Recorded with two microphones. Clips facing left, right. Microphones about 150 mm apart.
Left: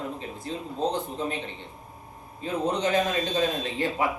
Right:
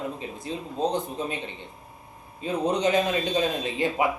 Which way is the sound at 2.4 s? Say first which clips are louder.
Right 2 dB; 15° right (ahead or behind).